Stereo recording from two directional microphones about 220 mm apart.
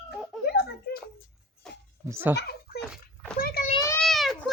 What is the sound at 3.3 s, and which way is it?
Speech, 40° left (ahead or behind).